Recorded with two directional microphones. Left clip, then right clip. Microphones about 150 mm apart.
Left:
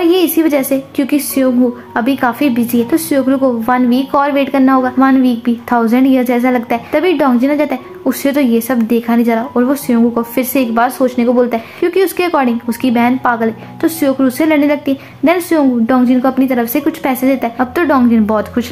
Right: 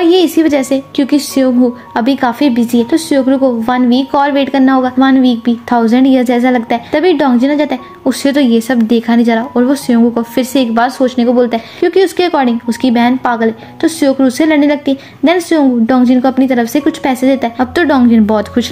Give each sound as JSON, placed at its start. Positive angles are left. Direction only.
{"t": 0.0, "sound": "a woman's voice", "side_deg": -25}